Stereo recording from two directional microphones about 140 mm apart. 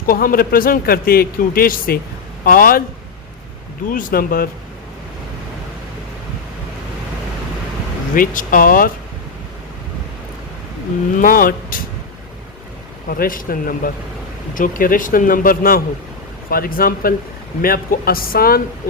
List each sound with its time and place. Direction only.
0.1 s a man's voice: 90° left
3.8 s a man's voice: 80° left
8.1 s speech: 75° left (ahead or behind)
11.2 s a man's voice: 90° left
13.1 s speech: 85° left
14.5 s a man's voice: 75° left (ahead or behind); by 18.6 s 90° left